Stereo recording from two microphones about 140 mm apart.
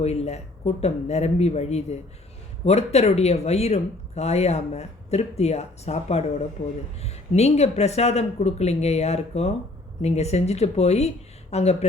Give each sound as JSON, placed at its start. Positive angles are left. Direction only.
{"t": 0.0, "sound": "speech", "side_deg": 50}